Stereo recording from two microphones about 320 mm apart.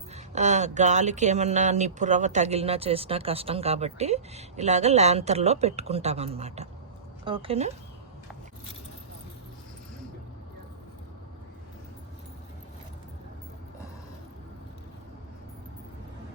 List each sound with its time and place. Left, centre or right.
0.1 s speech: right